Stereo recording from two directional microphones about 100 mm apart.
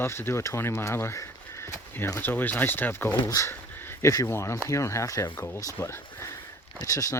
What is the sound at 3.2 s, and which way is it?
Speech, 35° left (ahead or behind).